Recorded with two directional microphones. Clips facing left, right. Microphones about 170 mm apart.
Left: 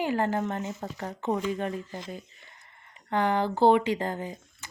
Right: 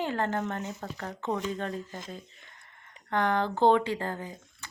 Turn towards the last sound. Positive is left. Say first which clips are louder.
# left 4 dB
turn(degrees=15)  # may be behind; listen again after turning